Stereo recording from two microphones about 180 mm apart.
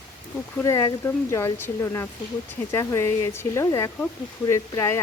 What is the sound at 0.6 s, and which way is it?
Speech, 15° left (ahead or behind).